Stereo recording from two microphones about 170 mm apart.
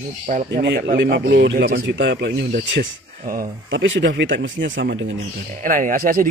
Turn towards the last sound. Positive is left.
turn(degrees=-55)  # may be behind; listen again after turning